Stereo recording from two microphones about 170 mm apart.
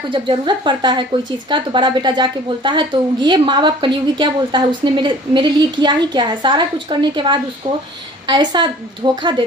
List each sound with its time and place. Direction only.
0.1 s a woman's voice: 30° right (ahead or behind)